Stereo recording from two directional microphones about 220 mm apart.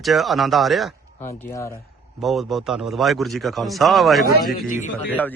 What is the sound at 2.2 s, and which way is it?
A man's voice, centre (ahead or behind).